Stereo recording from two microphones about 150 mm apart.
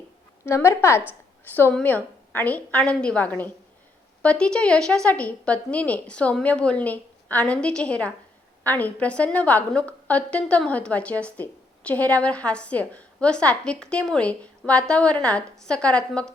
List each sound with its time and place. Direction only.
0.4 s a woman's voice: 20° left (ahead or behind)